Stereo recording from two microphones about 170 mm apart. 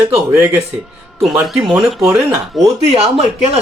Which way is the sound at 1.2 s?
Centre (ahead or behind).